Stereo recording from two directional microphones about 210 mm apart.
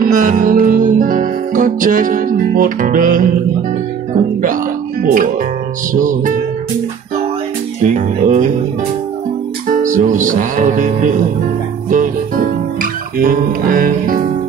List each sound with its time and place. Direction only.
0.0 s music: 40° right (ahead or behind)
4.1 s speech: 40° right (ahead or behind)
5.9 s music: 40° right (ahead or behind)
7.8 s music: 35° right (ahead or behind)
9.7 s music: 40° right (ahead or behind)